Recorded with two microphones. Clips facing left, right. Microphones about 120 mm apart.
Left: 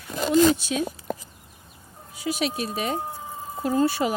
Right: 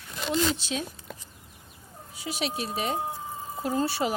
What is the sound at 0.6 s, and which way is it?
Speech, 25° right (ahead or behind).